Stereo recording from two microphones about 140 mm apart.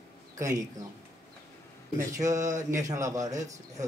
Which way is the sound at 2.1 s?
25° right (ahead or behind).